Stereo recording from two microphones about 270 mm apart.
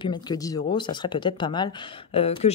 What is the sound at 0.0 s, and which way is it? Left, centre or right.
Speech, centre.